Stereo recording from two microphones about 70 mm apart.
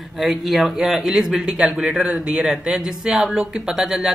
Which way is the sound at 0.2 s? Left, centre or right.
Centre.